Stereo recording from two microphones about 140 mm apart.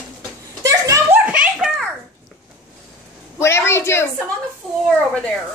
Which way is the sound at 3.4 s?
20° left (ahead or behind).